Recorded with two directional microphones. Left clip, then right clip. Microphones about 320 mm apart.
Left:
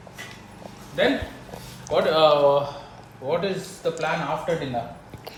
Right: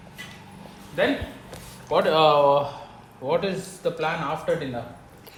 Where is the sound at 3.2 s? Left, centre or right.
Right.